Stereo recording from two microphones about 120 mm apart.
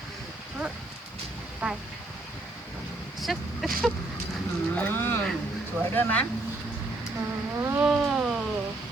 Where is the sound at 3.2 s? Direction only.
Centre (ahead or behind).